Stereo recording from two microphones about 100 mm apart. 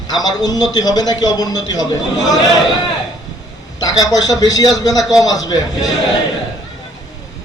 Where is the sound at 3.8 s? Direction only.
40° left (ahead or behind).